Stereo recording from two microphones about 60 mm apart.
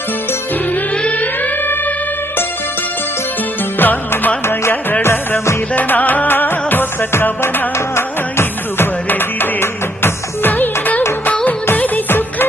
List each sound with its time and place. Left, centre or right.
3.8 s music: left
5.0 s music: left
5.7 s music: left